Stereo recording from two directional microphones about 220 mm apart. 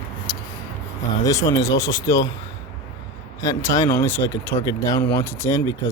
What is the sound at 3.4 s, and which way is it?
Speech, 15° left (ahead or behind).